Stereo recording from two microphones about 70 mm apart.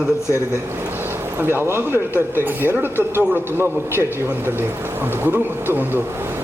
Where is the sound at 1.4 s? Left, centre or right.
Right.